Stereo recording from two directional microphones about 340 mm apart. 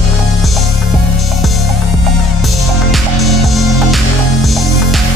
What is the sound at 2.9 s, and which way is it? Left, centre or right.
Music, centre.